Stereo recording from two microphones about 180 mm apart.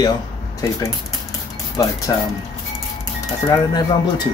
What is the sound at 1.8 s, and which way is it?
Speech, 20° left (ahead or behind).